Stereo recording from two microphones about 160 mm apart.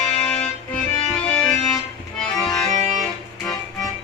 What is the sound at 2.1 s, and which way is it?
Accordion, 5° left (ahead or behind).